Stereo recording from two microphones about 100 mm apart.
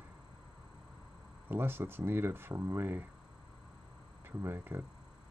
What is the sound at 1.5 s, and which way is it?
Speech, 20° right (ahead or behind).